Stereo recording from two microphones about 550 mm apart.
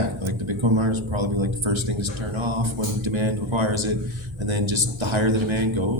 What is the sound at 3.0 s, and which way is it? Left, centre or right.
Speech, right.